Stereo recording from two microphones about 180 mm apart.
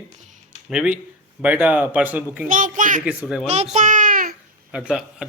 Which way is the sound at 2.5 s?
45° right (ahead or behind).